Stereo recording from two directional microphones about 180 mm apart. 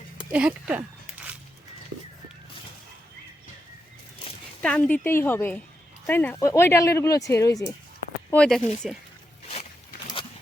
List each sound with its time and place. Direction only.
0.3 s a sound: 5° right (ahead or behind)
4.6 s speech: 10° left (ahead or behind)
8.3 s speech: 5° left (ahead or behind)